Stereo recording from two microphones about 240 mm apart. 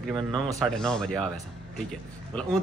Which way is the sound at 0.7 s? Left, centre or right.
Centre.